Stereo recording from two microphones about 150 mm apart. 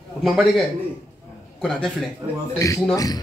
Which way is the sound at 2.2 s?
25° right (ahead or behind).